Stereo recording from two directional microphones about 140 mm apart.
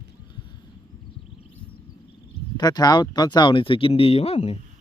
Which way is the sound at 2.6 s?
30° left (ahead or behind).